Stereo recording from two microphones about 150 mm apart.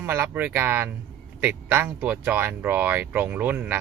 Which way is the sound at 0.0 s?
15° right (ahead or behind).